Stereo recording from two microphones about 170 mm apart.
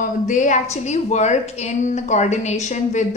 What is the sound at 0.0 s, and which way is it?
A woman's voice, 50° left (ahead or behind).